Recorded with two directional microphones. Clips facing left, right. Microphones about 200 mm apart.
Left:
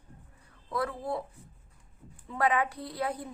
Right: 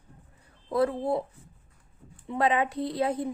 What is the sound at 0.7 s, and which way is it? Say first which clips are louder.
Speech: right 7 dB; 25° right (ahead or behind).